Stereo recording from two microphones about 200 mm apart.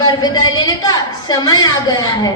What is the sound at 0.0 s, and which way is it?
A woman's voice, 20° left (ahead or behind).